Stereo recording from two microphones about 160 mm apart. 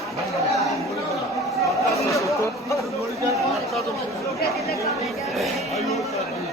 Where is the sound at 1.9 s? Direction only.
20° left (ahead or behind).